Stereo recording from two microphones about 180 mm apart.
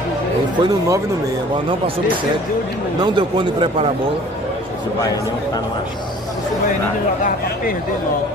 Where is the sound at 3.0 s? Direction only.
25° right (ahead or behind).